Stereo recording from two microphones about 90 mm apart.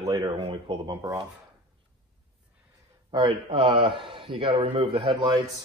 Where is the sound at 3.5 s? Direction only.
70° right (ahead or behind); by 5.3 s 90° right.